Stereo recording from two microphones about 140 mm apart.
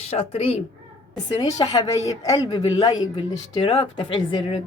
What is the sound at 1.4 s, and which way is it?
Speech, 25° left (ahead or behind).